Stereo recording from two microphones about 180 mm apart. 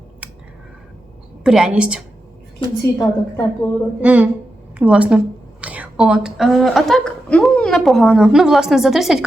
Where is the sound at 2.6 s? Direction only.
30° left (ahead or behind).